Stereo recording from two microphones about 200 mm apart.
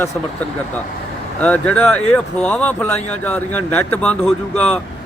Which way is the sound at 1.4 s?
5° left (ahead or behind).